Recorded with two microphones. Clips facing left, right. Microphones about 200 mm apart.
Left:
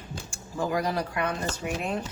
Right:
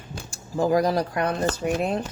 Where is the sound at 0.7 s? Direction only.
40° right (ahead or behind).